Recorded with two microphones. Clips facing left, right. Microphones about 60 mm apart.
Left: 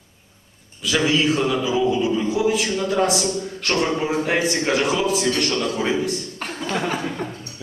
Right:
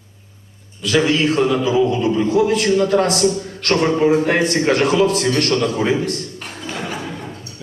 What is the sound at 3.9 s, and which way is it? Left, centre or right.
A man's voice, centre.